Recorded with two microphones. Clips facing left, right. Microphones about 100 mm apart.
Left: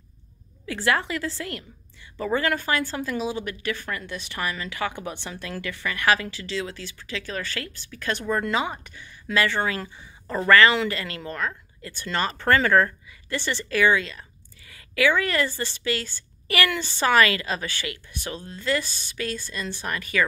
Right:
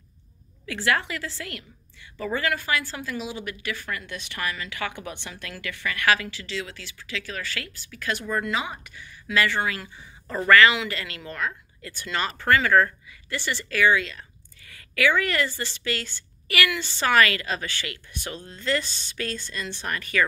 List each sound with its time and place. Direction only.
0.7 s a woman's voice: 20° left (ahead or behind)
8.4 s speech: 40° left (ahead or behind)
8.9 s a woman's voice: 25° left (ahead or behind)
13.3 s a woman's voice: 20° left (ahead or behind)
18.8 s speech: 25° right (ahead or behind)
19.9 s speech: 20° left (ahead or behind)